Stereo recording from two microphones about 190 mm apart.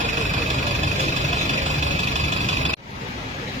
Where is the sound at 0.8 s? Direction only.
40° right (ahead or behind).